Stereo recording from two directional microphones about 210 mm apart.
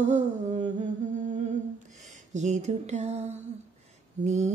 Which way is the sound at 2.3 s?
35° right (ahead or behind).